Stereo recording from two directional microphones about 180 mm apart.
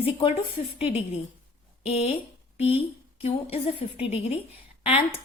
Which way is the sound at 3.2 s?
35° left (ahead or behind).